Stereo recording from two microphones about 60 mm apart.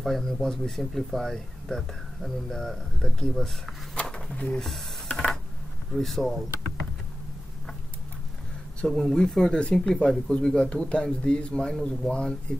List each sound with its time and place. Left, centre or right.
0.0 s speech: centre
3.9 s a sound: centre
4.4 s speech: centre
5.1 s a sound: centre
5.9 s speech: centre
8.8 s speech: centre